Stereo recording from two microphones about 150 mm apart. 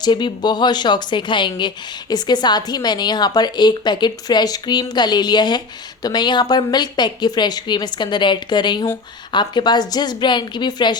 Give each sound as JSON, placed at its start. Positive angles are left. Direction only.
{"t": 0.0, "sound": "speech", "side_deg": 30}